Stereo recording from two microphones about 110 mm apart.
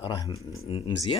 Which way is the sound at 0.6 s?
55° left (ahead or behind).